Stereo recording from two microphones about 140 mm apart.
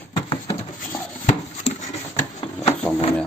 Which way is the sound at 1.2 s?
60° left (ahead or behind).